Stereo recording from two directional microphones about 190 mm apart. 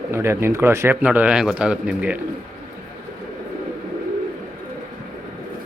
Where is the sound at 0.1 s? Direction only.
15° right (ahead or behind).